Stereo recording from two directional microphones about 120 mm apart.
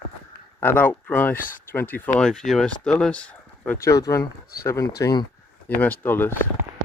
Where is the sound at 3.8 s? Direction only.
30° left (ahead or behind).